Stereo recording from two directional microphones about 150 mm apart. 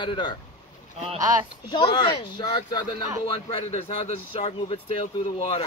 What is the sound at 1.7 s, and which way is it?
Speech, 35° left (ahead or behind).